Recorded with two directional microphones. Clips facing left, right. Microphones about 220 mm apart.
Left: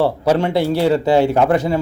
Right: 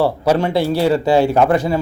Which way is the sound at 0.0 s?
25° left (ahead or behind).